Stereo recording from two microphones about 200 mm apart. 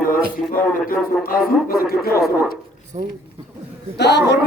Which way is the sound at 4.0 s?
55° left (ahead or behind).